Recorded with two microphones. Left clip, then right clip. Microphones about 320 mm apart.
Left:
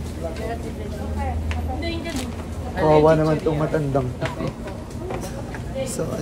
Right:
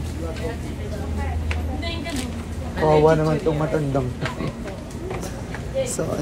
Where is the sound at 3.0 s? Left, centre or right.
Centre.